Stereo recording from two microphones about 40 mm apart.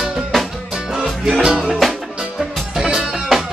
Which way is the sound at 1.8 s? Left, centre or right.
Centre.